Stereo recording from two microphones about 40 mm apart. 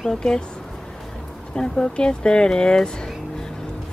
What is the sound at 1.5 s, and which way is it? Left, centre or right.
Speech, left.